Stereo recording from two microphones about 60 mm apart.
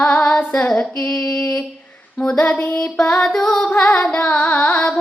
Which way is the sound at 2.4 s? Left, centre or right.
Left.